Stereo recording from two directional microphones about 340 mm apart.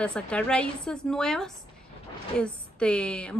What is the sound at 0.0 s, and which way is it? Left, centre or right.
A woman's voice, centre.